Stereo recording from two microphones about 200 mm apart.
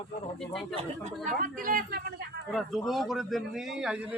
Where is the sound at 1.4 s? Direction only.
45° right (ahead or behind).